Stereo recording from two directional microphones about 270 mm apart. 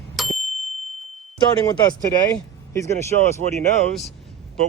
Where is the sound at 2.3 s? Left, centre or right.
Centre.